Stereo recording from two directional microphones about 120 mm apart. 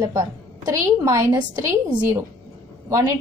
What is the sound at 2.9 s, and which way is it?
Speech, 25° right (ahead or behind).